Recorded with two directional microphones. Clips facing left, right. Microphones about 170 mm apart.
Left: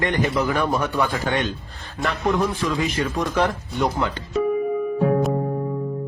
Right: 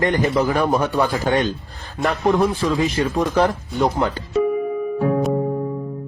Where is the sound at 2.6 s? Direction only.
30° right (ahead or behind).